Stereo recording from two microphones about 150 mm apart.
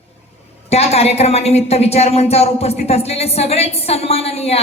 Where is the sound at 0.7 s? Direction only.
45° left (ahead or behind).